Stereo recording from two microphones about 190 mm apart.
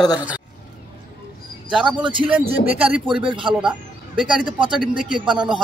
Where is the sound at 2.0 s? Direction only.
25° right (ahead or behind).